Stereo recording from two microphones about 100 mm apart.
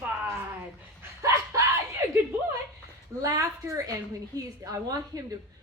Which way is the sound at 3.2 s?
35° right (ahead or behind).